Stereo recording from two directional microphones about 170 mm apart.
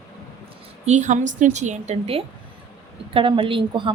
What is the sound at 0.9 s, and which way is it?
A woman's voice, 45° right (ahead or behind).